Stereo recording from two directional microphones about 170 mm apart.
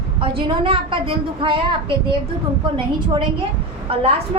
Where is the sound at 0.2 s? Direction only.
30° right (ahead or behind).